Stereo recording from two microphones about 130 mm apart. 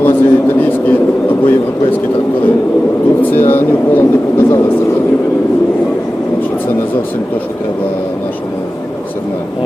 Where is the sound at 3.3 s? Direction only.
15° left (ahead or behind).